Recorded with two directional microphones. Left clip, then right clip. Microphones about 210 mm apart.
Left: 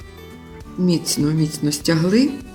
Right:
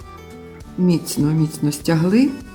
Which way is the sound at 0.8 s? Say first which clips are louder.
Even; 35° right (ahead or behind).